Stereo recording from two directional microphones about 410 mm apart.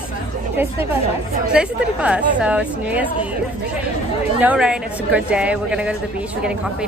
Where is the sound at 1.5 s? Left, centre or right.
Centre.